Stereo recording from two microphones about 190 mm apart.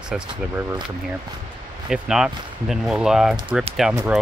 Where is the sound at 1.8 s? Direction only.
5° right (ahead or behind).